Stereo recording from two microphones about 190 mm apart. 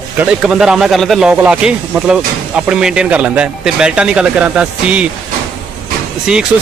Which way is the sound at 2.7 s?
5° right (ahead or behind).